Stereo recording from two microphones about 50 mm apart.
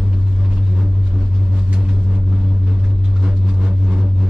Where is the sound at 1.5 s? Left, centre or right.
Right.